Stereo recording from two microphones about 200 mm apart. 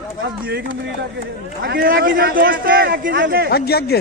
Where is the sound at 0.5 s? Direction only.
55° right (ahead or behind).